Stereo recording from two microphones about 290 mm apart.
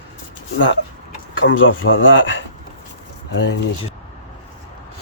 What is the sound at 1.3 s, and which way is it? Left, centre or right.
Speech, left.